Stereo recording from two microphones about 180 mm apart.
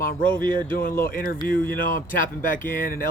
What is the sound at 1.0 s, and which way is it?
Speech, 55° left (ahead or behind).